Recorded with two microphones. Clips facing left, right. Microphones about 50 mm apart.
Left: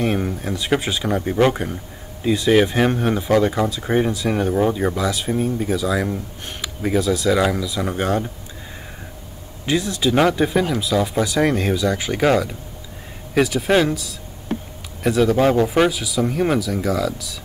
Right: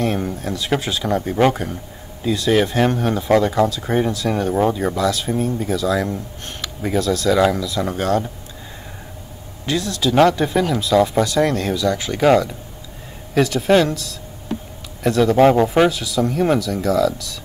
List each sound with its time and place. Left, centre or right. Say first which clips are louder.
0.0 s speech: even; centre
9.7 s speech: left 1 dB; centre
13.3 s speech: right 2 dB; centre
15.3 s speech: right 4 dB; right
15.6 s speech: right 2 dB; centre
15.9 s speech: right 1 dB; centre